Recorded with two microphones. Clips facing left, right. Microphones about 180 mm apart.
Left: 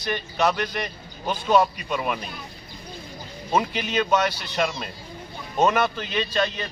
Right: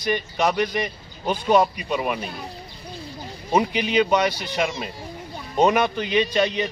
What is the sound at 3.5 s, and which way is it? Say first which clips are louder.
Speech: right 4 dB; 10° right (ahead or behind).